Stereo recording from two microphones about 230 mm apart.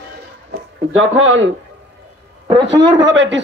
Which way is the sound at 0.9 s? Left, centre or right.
Right.